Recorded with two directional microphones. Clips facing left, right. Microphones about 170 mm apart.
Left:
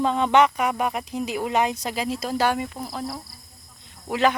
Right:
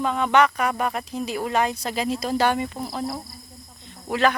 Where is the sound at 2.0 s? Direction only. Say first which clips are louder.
Right 2 dB; 5° left (ahead or behind).